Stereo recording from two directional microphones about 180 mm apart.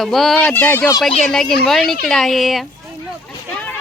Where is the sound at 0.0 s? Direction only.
Centre (ahead or behind).